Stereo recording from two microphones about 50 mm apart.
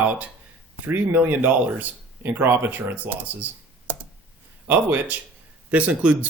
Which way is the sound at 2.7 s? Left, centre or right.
Right.